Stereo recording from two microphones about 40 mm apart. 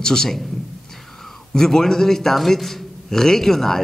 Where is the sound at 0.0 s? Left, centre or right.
Centre.